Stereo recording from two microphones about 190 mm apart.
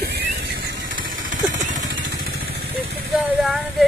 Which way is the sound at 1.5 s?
40° right (ahead or behind).